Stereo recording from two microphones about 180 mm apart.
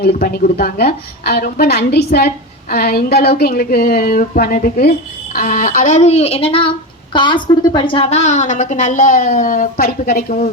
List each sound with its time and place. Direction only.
0.0 s a woman's voice: 55° left (ahead or behind)